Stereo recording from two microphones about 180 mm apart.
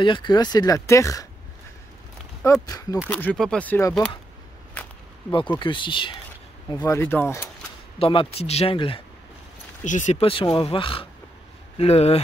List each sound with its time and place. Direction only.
0.0 s speech: 25° left (ahead or behind)
2.4 s speech: 20° left (ahead or behind)
3.1 s speech: 10° left (ahead or behind)
5.6 s speech: 25° left (ahead or behind)
6.8 s speech: 10° left (ahead or behind)
8.0 s speech: 30° left (ahead or behind)
9.8 s speech: 45° left (ahead or behind)